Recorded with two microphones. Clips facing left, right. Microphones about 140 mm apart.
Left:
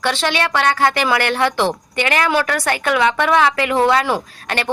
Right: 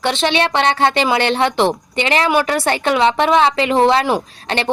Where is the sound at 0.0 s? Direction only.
20° right (ahead or behind).